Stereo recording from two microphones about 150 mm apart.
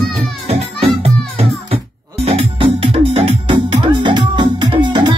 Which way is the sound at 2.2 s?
35° right (ahead or behind).